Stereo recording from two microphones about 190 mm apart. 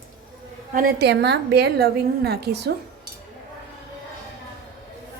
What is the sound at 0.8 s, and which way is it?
A woman's voice, 55° right (ahead or behind).